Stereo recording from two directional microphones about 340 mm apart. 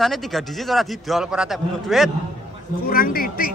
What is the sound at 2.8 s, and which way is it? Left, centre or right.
Speech, left.